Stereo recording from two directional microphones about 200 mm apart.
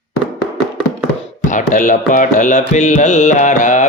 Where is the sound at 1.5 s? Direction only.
40° left (ahead or behind).